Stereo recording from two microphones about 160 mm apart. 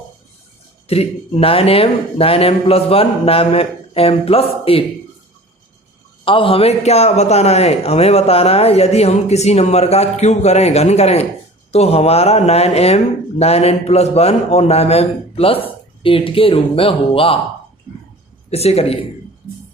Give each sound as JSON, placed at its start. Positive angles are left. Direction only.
{"t": 0.9, "sound": "a man's voice", "side_deg": 40}
{"t": 6.2, "sound": "a man's voice", "side_deg": 35}
{"t": 18.5, "sound": "a man's voice", "side_deg": 40}